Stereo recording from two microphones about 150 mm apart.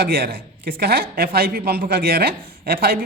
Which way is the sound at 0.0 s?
90° right.